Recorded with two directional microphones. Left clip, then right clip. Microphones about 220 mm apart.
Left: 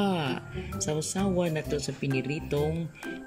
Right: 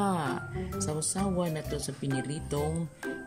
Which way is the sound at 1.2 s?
Centre (ahead or behind).